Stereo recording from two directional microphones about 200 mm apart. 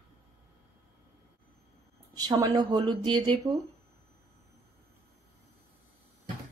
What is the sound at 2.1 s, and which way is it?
Speech, 20° right (ahead or behind).